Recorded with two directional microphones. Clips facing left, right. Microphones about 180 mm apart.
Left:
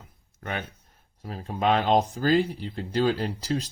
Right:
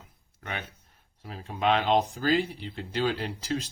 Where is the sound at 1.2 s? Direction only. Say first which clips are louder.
Left 2 dB; 40° left (ahead or behind).